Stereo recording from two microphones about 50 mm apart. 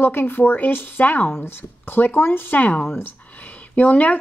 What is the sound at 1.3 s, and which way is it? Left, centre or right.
Speech, left.